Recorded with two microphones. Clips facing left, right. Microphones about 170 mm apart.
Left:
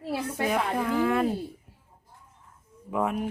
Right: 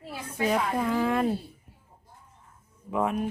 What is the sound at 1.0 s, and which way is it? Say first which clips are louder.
Speech: left 3 dB; centre (ahead or behind).